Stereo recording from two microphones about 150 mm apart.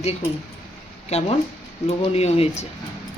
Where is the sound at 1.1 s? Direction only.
45° left (ahead or behind).